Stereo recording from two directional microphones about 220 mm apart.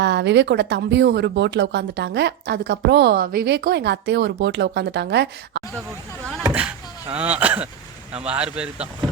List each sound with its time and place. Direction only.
0.0 s speech: 50° right (ahead or behind)
6.5 s speech: 5° right (ahead or behind)